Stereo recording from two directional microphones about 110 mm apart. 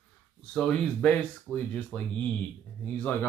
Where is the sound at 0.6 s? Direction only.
10° left (ahead or behind).